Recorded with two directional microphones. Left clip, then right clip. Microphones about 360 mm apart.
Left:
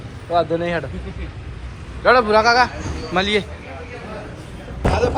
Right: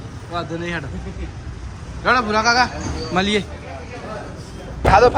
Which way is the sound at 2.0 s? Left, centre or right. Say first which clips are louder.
Left 4 dB; centre.